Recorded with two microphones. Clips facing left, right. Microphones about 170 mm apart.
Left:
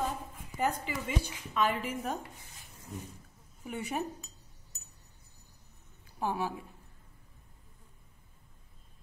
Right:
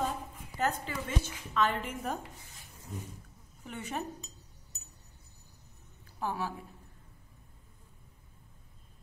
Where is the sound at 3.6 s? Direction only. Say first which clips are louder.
Left 3 dB; 10° left (ahead or behind).